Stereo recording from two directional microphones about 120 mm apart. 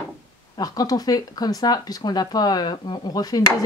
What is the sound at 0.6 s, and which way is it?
Speech, 30° left (ahead or behind).